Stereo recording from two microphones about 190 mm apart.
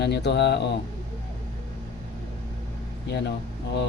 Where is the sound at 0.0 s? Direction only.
60° left (ahead or behind).